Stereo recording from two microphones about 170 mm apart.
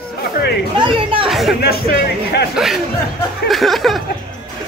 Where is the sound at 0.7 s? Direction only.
30° right (ahead or behind).